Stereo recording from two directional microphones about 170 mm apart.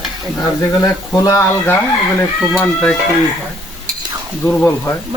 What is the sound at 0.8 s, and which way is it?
Speech, 20° left (ahead or behind).